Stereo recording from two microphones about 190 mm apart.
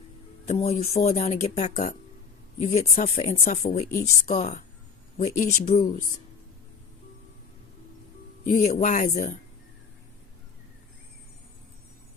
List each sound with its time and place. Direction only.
0.4 s speech: 35° left (ahead or behind)
8.4 s speech: 35° left (ahead or behind)